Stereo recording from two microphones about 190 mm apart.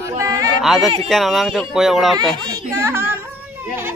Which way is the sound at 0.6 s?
Centre (ahead or behind).